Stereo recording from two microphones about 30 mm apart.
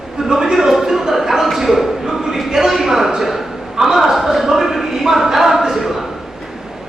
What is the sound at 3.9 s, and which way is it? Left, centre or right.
Speech, centre.